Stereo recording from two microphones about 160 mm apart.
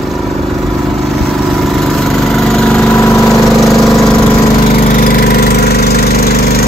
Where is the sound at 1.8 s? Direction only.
Centre (ahead or behind).